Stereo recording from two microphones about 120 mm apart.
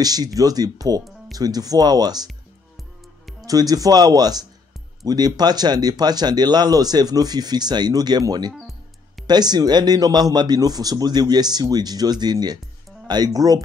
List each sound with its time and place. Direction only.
0.0 s speech: 30° right (ahead or behind)
3.4 s speech: 30° right (ahead or behind)